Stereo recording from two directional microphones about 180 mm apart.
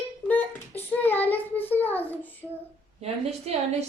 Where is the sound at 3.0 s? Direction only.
35° right (ahead or behind).